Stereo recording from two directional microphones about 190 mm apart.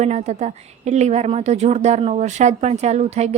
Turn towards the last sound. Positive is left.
turn(degrees=-35)  # may be behind; listen again after turning